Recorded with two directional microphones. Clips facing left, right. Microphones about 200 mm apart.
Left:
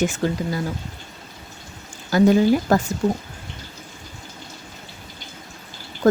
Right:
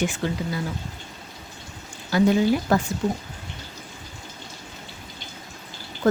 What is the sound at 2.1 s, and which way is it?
Speech, 45° left (ahead or behind).